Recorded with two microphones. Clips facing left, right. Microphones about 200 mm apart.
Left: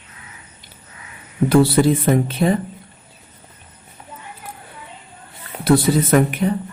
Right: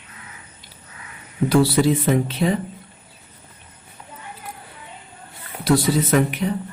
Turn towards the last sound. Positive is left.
turn(degrees=50)  # may be behind; listen again after turning